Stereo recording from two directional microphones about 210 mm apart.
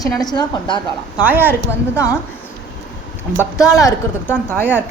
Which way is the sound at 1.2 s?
10° right (ahead or behind).